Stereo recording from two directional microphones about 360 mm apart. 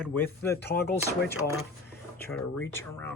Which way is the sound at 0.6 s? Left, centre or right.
Left.